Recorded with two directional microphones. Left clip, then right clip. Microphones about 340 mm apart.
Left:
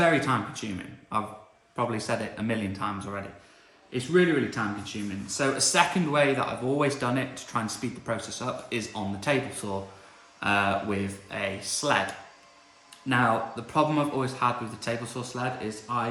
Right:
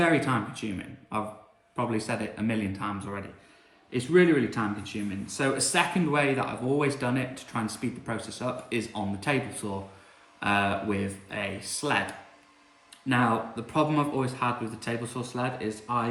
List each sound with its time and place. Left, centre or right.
0.6 s speech: centre
13.1 s speech: centre